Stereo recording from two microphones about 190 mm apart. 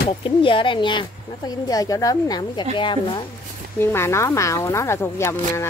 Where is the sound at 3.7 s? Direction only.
15° left (ahead or behind).